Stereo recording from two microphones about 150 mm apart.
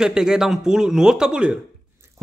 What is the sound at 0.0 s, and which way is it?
A man's voice, 5° right (ahead or behind).